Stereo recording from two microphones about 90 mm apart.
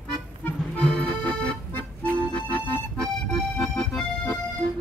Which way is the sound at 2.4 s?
15° left (ahead or behind).